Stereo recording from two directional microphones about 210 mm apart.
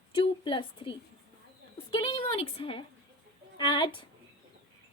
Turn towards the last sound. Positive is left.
turn(degrees=25)  # may be behind; listen again after turning